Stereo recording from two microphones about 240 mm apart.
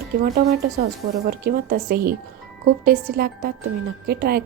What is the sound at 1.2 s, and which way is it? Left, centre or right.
A woman's voice, right.